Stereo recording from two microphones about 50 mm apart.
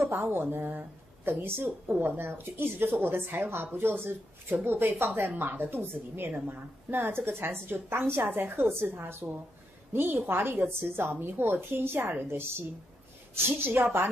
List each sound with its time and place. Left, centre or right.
0.0 s a woman's voice: right